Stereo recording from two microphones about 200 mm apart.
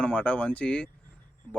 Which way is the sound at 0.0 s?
5° left (ahead or behind).